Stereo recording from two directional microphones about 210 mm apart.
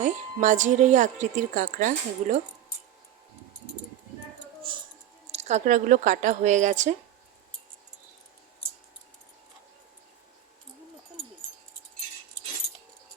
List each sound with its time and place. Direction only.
0.0 s a woman's voice: 35° right (ahead or behind)
4.7 s a sound: 25° right (ahead or behind)
5.3 s a woman's voice: 30° right (ahead or behind)